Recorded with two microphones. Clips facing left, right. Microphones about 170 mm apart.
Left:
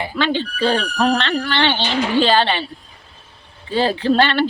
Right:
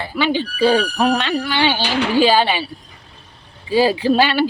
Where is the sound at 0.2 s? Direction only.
10° right (ahead or behind).